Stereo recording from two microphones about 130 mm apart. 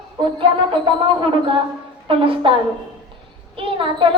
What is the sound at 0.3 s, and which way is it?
Music, 40° right (ahead or behind).